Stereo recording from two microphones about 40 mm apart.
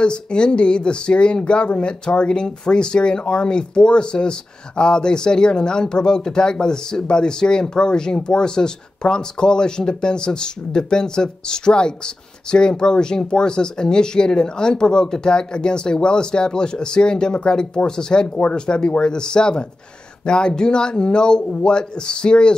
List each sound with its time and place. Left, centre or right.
0.0 s speech: left